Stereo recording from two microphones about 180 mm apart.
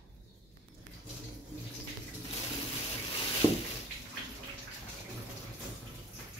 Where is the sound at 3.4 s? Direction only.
25° left (ahead or behind).